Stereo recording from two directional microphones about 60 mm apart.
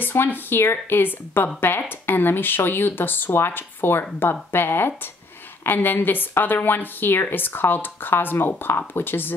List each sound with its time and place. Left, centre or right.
0.0 s a woman's voice: left